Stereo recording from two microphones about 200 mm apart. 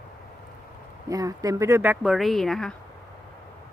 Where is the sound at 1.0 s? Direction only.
15° right (ahead or behind); by 2.7 s centre (ahead or behind).